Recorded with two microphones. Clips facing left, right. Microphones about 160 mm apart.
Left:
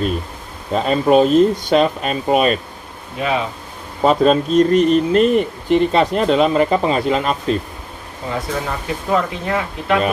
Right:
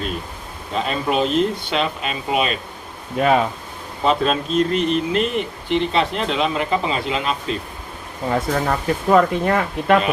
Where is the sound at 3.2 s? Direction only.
50° right (ahead or behind).